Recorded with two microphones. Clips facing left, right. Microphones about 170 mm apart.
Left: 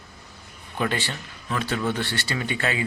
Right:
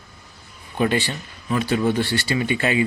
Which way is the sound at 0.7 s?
15° right (ahead or behind).